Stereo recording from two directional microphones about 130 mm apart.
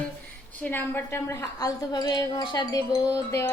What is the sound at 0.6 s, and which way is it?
A woman's voice, 15° left (ahead or behind).